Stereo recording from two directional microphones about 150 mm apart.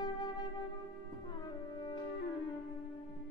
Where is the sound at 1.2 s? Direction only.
30° left (ahead or behind).